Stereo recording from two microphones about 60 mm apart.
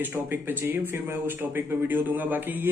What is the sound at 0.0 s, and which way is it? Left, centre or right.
Speech, right.